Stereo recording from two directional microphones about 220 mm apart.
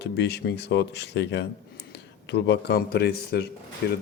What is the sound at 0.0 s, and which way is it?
A man's voice, 50° left (ahead or behind).